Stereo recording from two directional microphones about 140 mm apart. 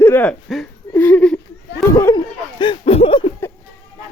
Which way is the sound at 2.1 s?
35° left (ahead or behind).